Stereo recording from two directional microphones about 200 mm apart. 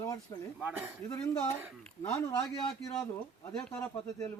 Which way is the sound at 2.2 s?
20° left (ahead or behind).